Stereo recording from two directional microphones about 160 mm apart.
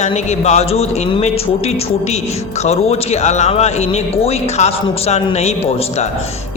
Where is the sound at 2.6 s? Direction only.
40° left (ahead or behind).